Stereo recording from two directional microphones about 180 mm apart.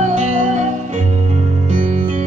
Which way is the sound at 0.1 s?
40° right (ahead or behind).